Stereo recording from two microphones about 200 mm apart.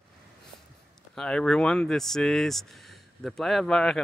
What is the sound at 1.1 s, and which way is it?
Speech, 5° left (ahead or behind).